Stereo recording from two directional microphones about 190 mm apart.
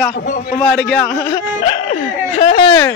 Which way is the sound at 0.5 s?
5° left (ahead or behind).